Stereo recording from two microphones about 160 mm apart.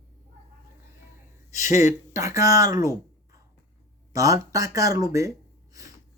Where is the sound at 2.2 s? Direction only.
20° right (ahead or behind).